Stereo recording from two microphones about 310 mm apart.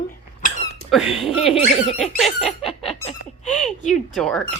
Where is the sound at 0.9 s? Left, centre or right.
Centre.